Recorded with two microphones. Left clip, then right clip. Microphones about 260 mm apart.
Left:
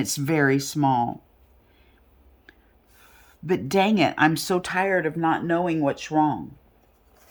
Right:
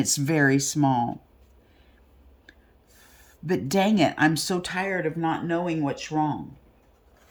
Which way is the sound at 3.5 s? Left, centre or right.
Centre.